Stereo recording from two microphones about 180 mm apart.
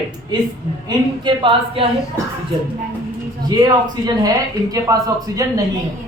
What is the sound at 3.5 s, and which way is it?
A man's voice, 25° right (ahead or behind).